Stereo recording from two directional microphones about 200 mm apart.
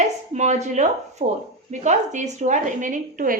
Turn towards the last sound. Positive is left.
turn(degrees=-40)  # may be behind; listen again after turning